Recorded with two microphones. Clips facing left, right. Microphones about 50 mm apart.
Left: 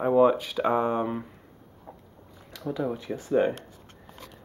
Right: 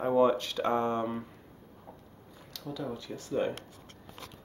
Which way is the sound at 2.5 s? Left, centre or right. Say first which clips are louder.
Left 7 dB; left.